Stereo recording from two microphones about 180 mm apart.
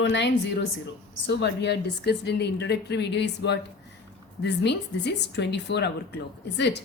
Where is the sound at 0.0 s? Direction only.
70° left (ahead or behind).